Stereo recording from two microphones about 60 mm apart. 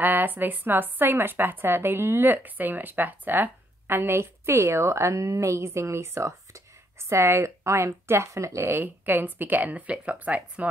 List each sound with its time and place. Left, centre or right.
0.0 s a woman's voice: right
8.6 s speech: right